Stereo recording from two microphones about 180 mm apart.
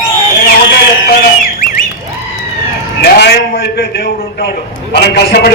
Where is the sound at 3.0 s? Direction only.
65° left (ahead or behind).